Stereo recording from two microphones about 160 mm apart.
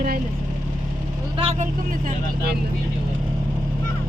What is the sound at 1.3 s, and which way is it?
Speech, 35° right (ahead or behind).